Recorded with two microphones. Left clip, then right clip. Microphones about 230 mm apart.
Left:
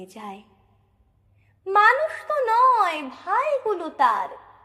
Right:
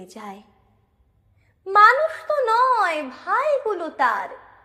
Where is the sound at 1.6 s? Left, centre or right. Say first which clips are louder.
Right 3 dB; centre.